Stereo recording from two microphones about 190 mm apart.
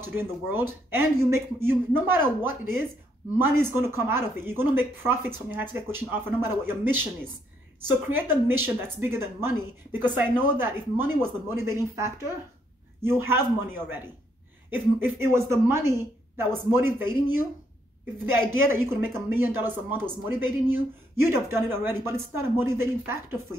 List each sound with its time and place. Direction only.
0.0 s speech: 10° right (ahead or behind)
8.1 s speech: 10° right (ahead or behind)